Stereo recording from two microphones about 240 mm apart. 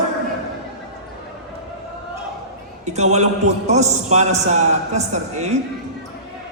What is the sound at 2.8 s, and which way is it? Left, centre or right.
A man's voice, right.